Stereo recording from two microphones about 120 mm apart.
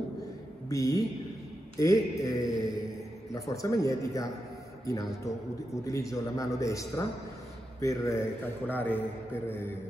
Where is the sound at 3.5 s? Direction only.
30° left (ahead or behind).